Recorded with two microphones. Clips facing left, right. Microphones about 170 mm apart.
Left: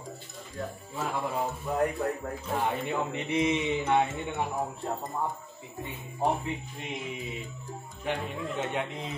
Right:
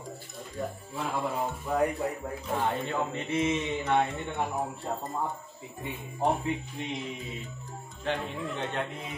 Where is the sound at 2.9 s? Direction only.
15° left (ahead or behind).